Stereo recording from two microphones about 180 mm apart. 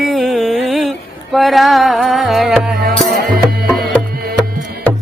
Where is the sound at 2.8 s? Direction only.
55° right (ahead or behind).